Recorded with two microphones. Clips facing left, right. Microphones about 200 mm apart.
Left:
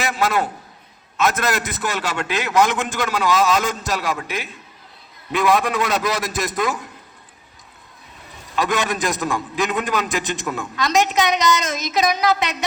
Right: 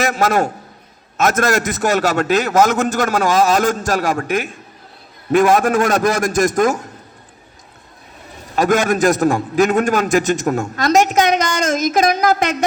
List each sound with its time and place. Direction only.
0.0 s a man's voice: 45° right (ahead or behind)
8.5 s a man's voice: 45° right (ahead or behind)